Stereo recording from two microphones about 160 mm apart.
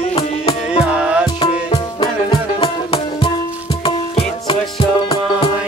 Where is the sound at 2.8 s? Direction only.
40° left (ahead or behind).